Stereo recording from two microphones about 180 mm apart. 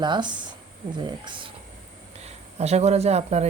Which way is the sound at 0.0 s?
25° right (ahead or behind).